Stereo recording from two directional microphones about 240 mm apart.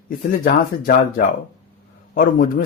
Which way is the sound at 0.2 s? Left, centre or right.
Left.